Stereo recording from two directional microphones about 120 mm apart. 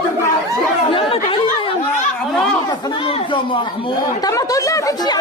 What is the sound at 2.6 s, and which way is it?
Speech, 35° left (ahead or behind).